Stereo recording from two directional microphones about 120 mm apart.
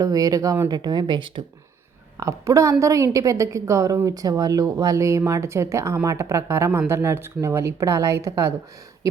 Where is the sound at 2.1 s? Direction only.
25° right (ahead or behind).